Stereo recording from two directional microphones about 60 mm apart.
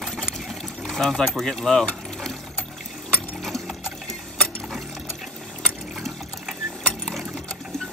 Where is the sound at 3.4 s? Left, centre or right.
Centre.